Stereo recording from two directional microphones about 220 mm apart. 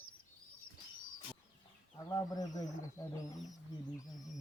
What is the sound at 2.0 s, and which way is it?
Speech, 15° left (ahead or behind).